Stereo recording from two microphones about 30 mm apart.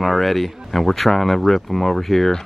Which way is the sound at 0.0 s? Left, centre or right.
Centre.